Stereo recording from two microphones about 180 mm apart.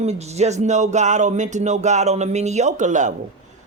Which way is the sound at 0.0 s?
35° right (ahead or behind).